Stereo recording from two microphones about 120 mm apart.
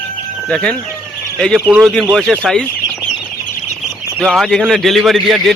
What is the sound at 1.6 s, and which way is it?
A man's voice, 10° right (ahead or behind).